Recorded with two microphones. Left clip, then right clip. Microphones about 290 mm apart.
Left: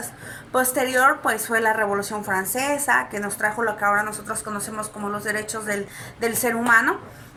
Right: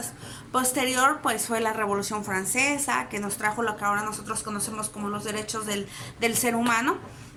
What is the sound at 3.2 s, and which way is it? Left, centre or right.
Speech, centre.